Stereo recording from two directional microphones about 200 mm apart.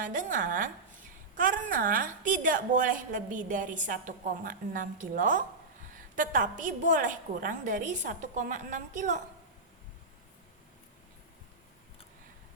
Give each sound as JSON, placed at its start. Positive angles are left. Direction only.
{"t": 0.0, "sound": "a woman's voice", "side_deg": -40}